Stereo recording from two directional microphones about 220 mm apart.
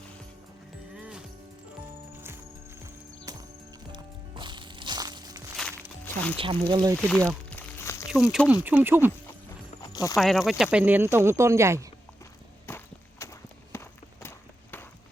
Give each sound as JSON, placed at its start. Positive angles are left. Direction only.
{"t": 0.9, "sound": "moo", "side_deg": -5}
{"t": 2.1, "sound": "music", "side_deg": -10}
{"t": 3.3, "sound": "clip-clop", "side_deg": -15}
{"t": 3.9, "sound": "music", "side_deg": -20}
{"t": 6.1, "sound": "music", "side_deg": 10}
{"t": 6.3, "sound": "speech", "side_deg": -25}
{"t": 6.9, "sound": "a sound", "side_deg": 5}
{"t": 8.1, "sound": "speech", "side_deg": 0}
{"t": 9.2, "sound": "horse", "side_deg": 15}
{"t": 10.2, "sound": "speech", "side_deg": 0}
{"t": 12.6, "sound": "walk", "side_deg": 10}
{"t": 13.7, "sound": "run", "side_deg": 10}